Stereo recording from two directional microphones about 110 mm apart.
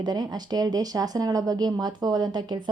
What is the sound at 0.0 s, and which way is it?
Speech, 40° right (ahead or behind).